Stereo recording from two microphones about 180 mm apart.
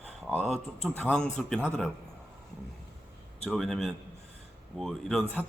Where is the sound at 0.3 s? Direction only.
5° left (ahead or behind).